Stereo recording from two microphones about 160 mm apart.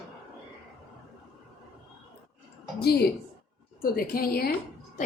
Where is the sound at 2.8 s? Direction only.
85° left.